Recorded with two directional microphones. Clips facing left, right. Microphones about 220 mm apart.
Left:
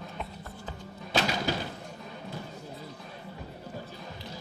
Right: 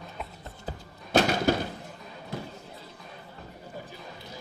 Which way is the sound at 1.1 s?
50° right (ahead or behind).